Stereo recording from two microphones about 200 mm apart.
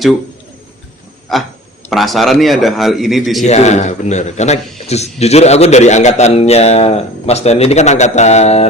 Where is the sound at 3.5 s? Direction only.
35° left (ahead or behind).